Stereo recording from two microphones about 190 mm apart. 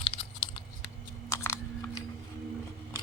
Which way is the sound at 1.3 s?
15° left (ahead or behind).